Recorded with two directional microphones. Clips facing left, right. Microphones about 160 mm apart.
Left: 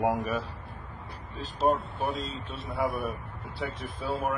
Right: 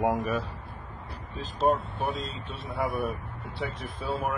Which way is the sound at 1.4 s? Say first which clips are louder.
Right 1 dB; centre (ahead or behind).